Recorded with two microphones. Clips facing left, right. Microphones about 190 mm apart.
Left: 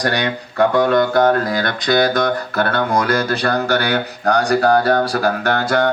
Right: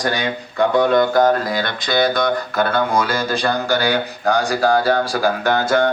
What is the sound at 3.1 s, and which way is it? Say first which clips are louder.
Speech: left 2 dB; 60° left (ahead or behind).